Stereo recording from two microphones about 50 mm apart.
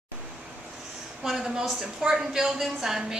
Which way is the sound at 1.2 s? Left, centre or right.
Centre.